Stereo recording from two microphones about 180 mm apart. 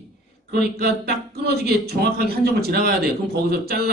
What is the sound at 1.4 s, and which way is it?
A man's voice, 60° right (ahead or behind).